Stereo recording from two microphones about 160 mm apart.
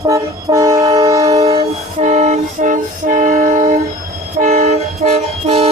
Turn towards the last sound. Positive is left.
turn(degrees=-40)  # may be behind; listen again after turning